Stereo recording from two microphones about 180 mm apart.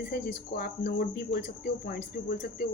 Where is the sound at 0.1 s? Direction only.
55° left (ahead or behind).